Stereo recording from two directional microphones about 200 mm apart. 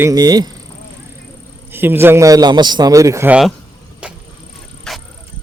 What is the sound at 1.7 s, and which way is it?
Speech, 10° right (ahead or behind).